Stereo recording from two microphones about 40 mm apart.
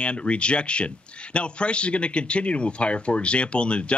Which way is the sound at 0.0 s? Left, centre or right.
Left.